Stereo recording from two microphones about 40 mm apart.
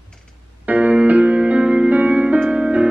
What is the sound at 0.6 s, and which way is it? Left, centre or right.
Music, right.